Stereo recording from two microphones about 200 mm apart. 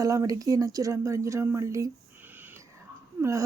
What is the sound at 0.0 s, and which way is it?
Speech, 15° right (ahead or behind).